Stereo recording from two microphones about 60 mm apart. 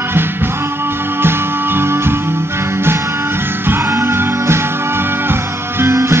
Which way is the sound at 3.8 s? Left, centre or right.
Right.